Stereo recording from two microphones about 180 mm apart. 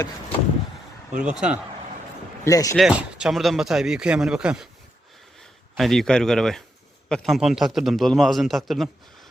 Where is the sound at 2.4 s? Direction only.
15° left (ahead or behind).